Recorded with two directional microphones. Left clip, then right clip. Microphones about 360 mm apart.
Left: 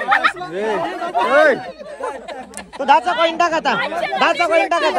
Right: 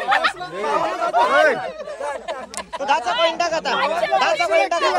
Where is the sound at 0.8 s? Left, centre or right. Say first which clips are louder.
Right 1 dB; centre.